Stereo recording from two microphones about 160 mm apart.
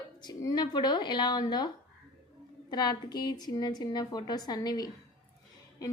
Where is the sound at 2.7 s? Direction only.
25° left (ahead or behind).